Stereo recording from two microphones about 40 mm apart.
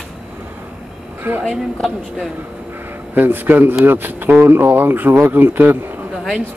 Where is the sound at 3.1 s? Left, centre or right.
Right.